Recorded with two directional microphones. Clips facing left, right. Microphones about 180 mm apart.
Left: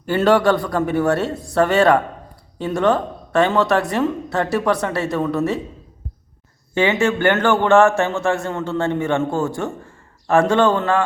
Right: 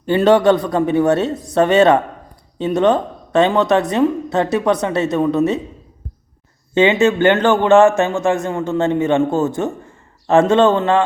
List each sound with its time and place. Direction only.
0.0 s a woman's voice: 20° right (ahead or behind)
6.7 s a woman's voice: 20° right (ahead or behind)